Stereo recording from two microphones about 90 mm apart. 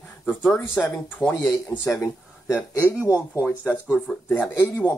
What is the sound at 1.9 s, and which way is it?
Speech, 35° left (ahead or behind).